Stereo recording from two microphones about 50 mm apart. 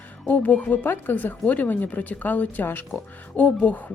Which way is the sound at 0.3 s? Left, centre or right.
Left.